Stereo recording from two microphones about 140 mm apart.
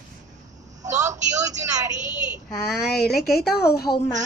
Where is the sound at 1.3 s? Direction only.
25° right (ahead or behind).